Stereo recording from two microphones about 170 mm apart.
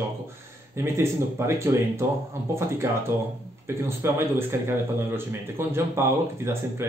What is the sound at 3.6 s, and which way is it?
Speech, 15° right (ahead or behind).